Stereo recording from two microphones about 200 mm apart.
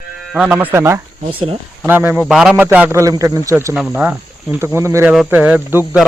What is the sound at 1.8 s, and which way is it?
Speech, 10° right (ahead or behind).